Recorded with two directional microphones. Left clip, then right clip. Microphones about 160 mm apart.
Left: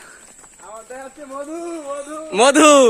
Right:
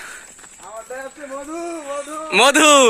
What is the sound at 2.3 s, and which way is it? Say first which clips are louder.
Speech: left 1 dB; centre (ahead or behind).